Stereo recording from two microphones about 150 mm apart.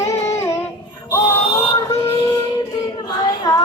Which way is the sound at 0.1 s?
20° left (ahead or behind).